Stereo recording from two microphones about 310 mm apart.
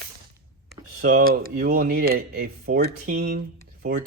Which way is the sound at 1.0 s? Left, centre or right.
Right.